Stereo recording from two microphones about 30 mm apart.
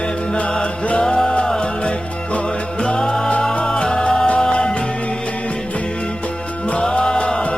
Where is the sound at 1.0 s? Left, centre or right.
Centre.